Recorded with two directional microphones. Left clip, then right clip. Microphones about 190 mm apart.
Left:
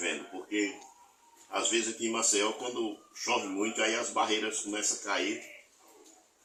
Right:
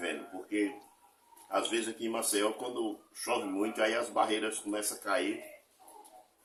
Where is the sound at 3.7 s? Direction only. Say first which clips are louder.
Even; 25° right (ahead or behind).